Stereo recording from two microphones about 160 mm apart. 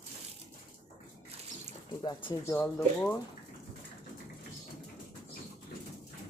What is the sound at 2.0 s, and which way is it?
Speech, 20° left (ahead or behind).